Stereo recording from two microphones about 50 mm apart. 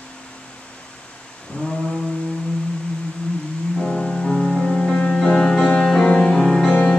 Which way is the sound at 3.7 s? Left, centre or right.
Centre.